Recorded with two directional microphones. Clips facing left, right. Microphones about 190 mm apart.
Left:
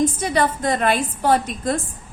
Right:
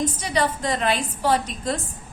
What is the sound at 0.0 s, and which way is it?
A woman's voice, 50° left (ahead or behind).